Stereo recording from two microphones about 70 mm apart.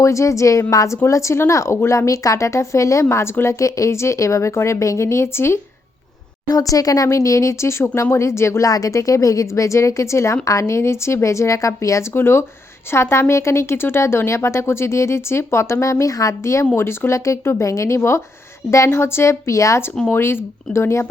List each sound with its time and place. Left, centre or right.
0.0 s a woman's voice: left
1.0 s a woman's voice: left
6.5 s a woman's voice: left
12.1 s a woman's voice: left
20.1 s a woman's voice: left